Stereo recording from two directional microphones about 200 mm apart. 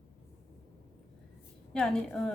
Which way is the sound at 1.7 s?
5° left (ahead or behind).